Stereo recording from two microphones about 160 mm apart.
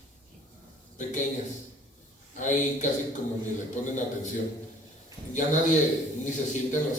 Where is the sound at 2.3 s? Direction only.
50° left (ahead or behind).